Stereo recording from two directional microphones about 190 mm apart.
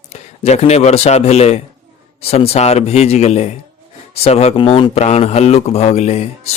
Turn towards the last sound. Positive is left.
turn(degrees=35)  # may be behind; listen again after turning